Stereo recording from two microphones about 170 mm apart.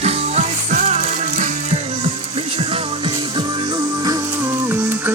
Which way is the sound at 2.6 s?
30° right (ahead or behind).